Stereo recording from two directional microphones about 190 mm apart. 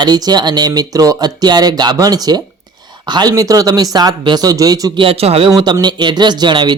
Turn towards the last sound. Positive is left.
turn(degrees=-25)  # may be behind; listen again after turning